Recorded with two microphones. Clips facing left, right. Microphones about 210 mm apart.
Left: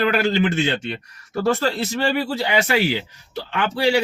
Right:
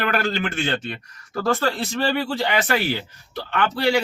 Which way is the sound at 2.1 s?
15° left (ahead or behind).